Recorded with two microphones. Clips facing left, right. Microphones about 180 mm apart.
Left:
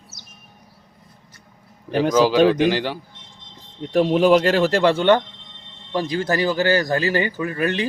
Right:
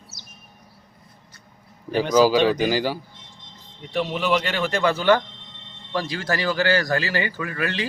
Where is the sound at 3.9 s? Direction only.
45° left (ahead or behind).